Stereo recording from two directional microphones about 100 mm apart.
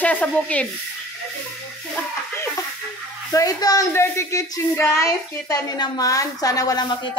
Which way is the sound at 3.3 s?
40° left (ahead or behind).